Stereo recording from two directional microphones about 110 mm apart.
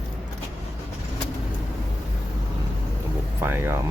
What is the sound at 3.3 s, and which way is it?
Speech, 20° right (ahead or behind).